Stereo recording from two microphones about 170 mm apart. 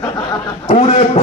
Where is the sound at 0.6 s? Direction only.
40° left (ahead or behind).